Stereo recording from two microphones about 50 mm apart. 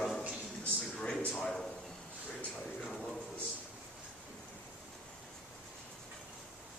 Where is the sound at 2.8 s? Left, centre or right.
Centre.